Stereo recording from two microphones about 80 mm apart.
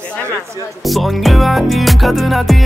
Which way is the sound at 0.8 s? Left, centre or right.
Centre.